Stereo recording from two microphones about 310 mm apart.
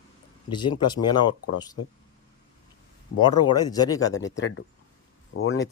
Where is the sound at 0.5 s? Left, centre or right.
Centre.